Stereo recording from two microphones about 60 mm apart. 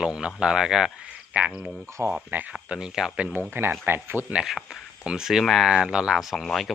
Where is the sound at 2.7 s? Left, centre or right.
Centre.